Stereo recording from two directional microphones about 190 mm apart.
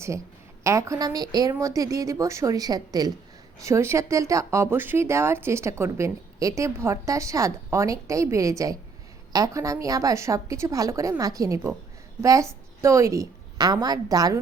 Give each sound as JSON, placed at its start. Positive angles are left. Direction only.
{"t": 0.6, "sound": "a woman's voice", "side_deg": -15}